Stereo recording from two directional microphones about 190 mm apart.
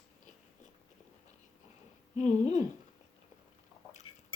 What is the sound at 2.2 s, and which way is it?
Speech, 40° left (ahead or behind).